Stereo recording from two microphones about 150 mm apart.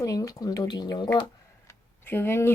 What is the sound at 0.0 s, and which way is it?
Speech, 25° left (ahead or behind).